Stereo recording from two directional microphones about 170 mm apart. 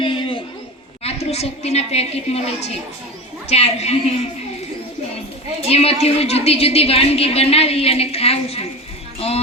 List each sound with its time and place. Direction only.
0.0 s a sound: 30° left (ahead or behind)
1.0 s a woman's voice: 40° left (ahead or behind)
5.6 s a woman's voice: 35° left (ahead or behind)